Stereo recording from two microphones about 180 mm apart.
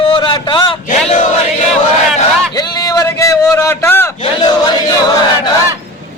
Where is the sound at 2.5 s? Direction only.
20° left (ahead or behind).